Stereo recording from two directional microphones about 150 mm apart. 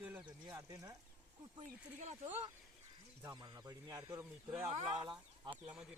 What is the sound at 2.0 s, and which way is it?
Speech, 50° right (ahead or behind).